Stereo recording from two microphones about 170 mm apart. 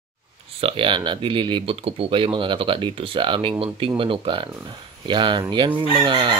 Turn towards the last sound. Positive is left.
turn(degrees=-30)  # may be behind; listen again after turning